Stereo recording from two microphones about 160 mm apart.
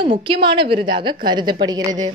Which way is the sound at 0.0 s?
30° right (ahead or behind).